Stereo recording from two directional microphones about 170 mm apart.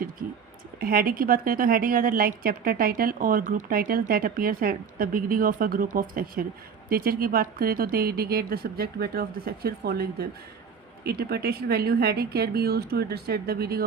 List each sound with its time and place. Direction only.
0.8 s a woman's voice: 60° right (ahead or behind)